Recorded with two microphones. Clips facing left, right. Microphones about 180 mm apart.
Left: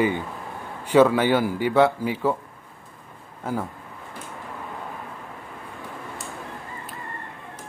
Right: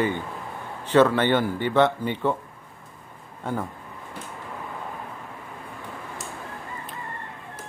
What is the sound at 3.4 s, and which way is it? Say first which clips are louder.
Speech: left 1 dB; 5° left (ahead or behind).